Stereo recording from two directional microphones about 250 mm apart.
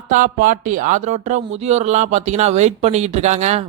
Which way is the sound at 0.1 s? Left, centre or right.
Right.